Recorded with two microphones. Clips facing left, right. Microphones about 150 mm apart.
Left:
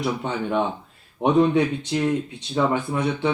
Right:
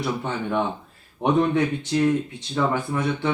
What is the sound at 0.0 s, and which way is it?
A man's voice, 15° left (ahead or behind).